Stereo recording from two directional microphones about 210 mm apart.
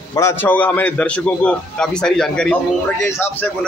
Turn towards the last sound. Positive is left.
turn(degrees=10)  # may be behind; listen again after turning